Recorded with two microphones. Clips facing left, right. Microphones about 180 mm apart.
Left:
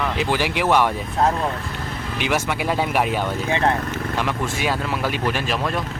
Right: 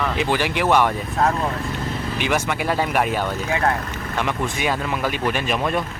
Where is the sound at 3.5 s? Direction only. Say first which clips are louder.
Left 1 dB; 25° left (ahead or behind).